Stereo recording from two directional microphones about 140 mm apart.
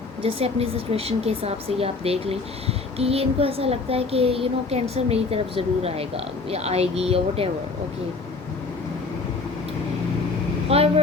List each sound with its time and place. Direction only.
0.2 s speech: 45° right (ahead or behind)
10.7 s vehicle: 45° right (ahead or behind)